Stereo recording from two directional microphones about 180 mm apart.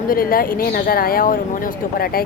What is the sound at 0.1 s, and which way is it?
Speech, 55° left (ahead or behind).